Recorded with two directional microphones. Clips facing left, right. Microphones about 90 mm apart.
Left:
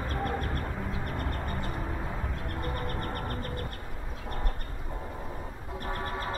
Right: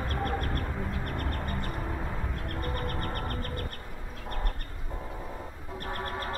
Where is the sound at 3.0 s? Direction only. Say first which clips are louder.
Even; 50° right (ahead or behind).